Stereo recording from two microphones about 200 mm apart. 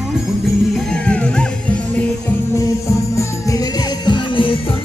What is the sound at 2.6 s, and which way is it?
Music, 15° left (ahead or behind).